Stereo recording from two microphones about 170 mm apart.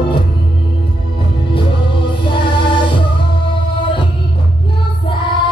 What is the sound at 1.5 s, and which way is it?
Music, 30° left (ahead or behind).